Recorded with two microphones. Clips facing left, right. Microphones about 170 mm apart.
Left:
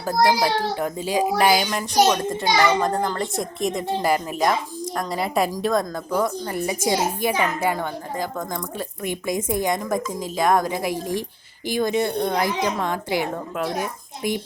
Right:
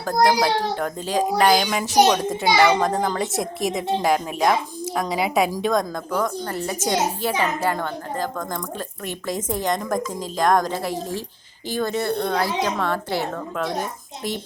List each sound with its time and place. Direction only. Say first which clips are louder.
0.1 s a woman's voice: right 1 dB; 10° left (ahead or behind)